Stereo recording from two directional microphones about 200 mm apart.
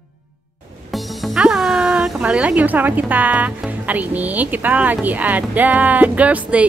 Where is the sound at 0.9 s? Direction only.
Centre (ahead or behind).